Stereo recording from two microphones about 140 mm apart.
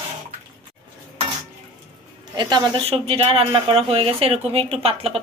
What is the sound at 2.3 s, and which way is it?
Speech, 30° right (ahead or behind).